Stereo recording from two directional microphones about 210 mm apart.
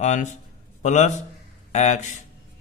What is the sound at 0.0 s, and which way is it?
Speech, 35° left (ahead or behind).